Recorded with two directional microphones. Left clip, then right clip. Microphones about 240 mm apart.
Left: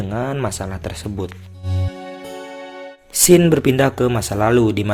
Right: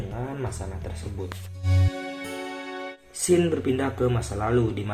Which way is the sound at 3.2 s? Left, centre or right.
Left.